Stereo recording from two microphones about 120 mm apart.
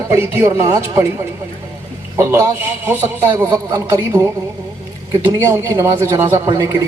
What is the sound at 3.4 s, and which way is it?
Speech, 30° right (ahead or behind).